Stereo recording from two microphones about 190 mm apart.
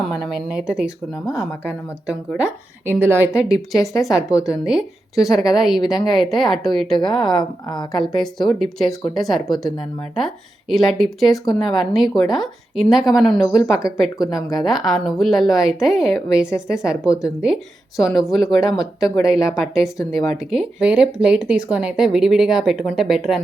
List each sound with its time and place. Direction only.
0.0 s a woman's voice: centre (ahead or behind)
7.3 s a woman's voice: 20° left (ahead or behind)
7.9 s a woman's voice: centre (ahead or behind)